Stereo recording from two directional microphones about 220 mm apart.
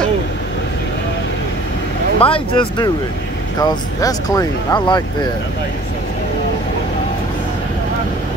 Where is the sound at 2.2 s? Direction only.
25° left (ahead or behind).